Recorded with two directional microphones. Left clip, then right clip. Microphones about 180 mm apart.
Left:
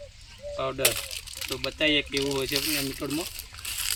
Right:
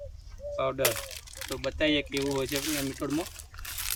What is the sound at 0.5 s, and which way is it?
Speech, 10° right (ahead or behind).